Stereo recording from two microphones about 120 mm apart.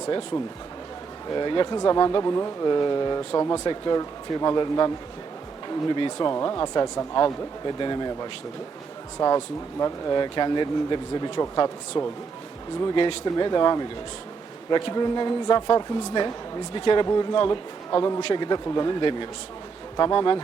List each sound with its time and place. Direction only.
1.4 s speech: 40° left (ahead or behind)
3.4 s speech: 25° left (ahead or behind)
3.7 s speech: 35° left (ahead or behind)